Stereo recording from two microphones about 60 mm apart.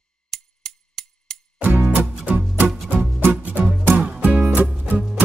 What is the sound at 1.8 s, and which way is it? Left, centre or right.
Music, right.